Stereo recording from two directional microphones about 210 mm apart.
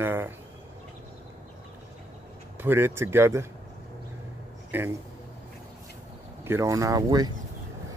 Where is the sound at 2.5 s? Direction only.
10° right (ahead or behind).